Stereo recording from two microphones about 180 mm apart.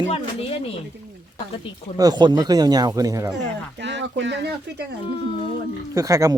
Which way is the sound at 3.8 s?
80° right.